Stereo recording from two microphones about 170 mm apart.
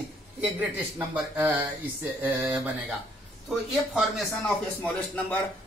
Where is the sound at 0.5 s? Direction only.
10° right (ahead or behind).